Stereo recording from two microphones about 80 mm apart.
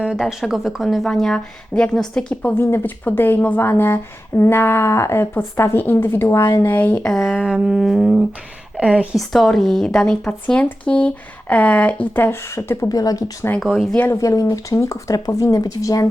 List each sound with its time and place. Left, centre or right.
0.2 s speech: centre; by 7.0 s left
7.0 s speech: centre
8.8 s speech: centre
9.1 s speech: centre; by 12.9 s left
12.9 s speech: left
13.6 s speech: centre
14.1 s speech: left